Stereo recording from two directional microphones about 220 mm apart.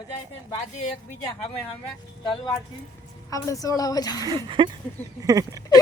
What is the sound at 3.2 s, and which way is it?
A woman's voice, 15° left (ahead or behind).